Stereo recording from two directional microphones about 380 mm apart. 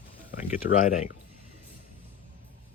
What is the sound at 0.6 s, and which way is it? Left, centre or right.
Speech, left.